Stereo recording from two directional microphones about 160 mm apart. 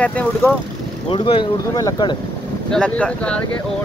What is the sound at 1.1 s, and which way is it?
Speech, 35° left (ahead or behind).